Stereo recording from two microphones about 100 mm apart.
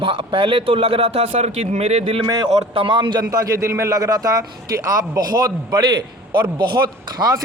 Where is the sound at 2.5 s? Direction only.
65° right (ahead or behind).